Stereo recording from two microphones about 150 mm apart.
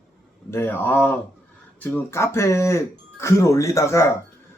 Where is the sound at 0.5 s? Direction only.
15° left (ahead or behind).